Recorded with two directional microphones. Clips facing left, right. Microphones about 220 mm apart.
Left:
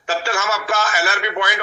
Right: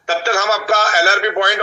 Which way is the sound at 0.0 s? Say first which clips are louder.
Right 4 dB; 40° right (ahead or behind).